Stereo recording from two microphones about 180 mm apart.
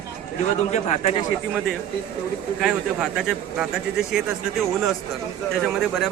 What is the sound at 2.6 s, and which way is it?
Speech, 5° right (ahead or behind).